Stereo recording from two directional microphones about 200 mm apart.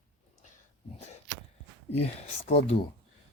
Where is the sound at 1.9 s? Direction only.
30° left (ahead or behind).